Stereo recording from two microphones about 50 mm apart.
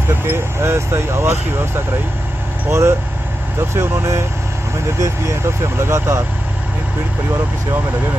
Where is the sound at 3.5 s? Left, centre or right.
Right.